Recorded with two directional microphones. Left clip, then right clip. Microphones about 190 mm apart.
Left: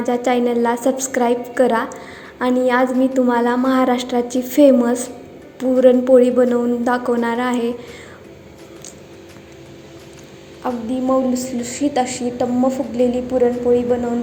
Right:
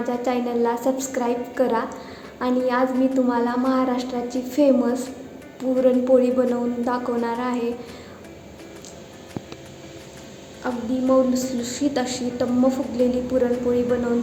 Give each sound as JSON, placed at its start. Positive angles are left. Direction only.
{"t": 0.0, "sound": "a woman's voice", "side_deg": 30}
{"t": 10.6, "sound": "a woman's voice", "side_deg": 15}